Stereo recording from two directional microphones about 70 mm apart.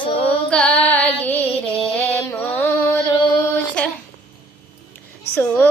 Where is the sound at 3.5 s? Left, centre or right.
Centre.